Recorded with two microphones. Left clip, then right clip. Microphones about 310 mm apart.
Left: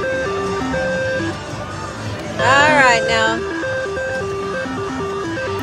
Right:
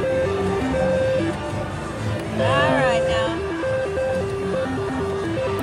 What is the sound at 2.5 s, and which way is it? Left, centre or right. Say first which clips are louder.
Music: left 8 dB; left.